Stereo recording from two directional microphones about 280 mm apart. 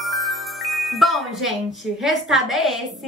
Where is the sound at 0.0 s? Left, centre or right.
Centre.